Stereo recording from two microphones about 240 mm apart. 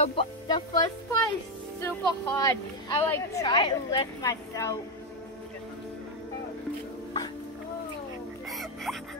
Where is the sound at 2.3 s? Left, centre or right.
Centre.